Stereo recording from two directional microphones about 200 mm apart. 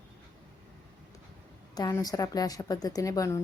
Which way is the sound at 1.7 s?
20° left (ahead or behind).